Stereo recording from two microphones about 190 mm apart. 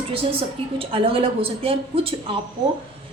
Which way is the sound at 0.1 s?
30° right (ahead or behind).